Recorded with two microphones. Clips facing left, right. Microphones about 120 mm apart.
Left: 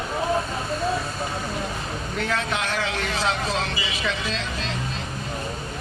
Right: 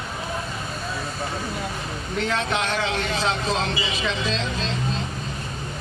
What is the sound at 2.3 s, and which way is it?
Speech, 25° right (ahead or behind).